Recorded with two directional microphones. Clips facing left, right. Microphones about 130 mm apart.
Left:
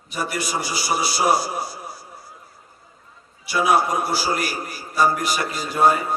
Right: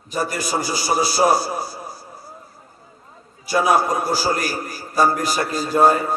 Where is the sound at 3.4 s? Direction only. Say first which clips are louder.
Right 2 dB; 40° right (ahead or behind).